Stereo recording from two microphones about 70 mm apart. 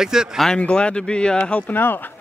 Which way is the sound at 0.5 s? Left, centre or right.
Centre.